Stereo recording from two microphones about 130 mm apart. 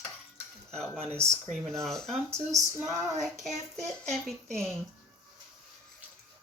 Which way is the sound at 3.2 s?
Centre (ahead or behind).